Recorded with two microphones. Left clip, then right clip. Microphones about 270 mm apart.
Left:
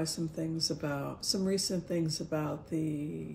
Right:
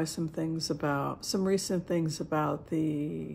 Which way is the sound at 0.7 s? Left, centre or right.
Centre.